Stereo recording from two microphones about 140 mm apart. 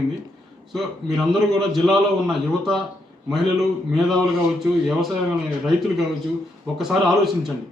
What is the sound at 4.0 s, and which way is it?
Speech, centre (ahead or behind).